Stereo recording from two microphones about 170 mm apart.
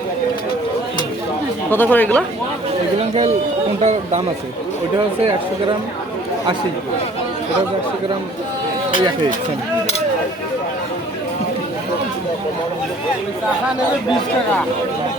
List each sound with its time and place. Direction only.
1.7 s speech: 10° left (ahead or behind)
3.8 s speech: 40° right (ahead or behind)